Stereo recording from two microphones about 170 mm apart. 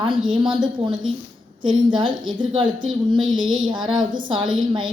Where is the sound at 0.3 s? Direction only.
30° right (ahead or behind).